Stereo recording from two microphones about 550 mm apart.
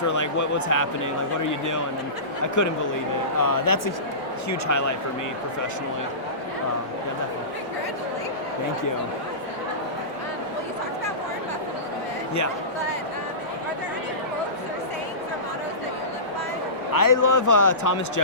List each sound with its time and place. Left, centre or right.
0.1 s a man's voice: left
17.0 s a man's voice: left